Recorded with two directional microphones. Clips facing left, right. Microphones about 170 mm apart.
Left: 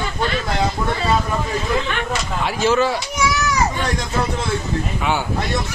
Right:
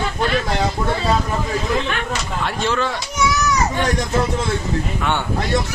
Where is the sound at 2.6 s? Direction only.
5° left (ahead or behind).